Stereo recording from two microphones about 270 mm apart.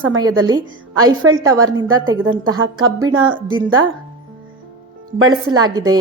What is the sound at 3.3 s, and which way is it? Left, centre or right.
Speech, centre.